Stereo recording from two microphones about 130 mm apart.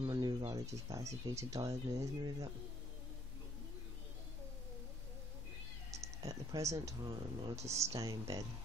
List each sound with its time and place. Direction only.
0.0 s speech: 30° right (ahead or behind)
5.9 s speech: 25° right (ahead or behind)